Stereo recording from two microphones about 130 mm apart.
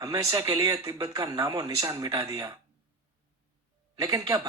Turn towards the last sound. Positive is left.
turn(degrees=-25)  # may be behind; listen again after turning